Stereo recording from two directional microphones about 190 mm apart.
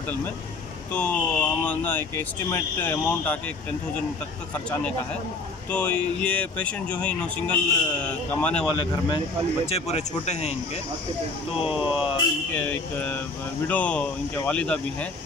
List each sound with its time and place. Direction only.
0.9 s speech: 5° left (ahead or behind)
5.7 s speech: 5° left (ahead or behind)
9.7 s speech: 35° left (ahead or behind)
11.8 s speech: 30° left (ahead or behind)
12.5 s speech: 10° left (ahead or behind)